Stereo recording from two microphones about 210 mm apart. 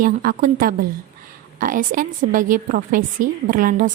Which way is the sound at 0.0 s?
40° right (ahead or behind).